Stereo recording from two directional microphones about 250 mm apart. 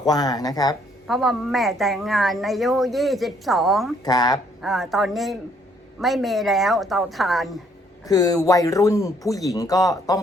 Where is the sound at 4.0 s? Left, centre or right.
Centre.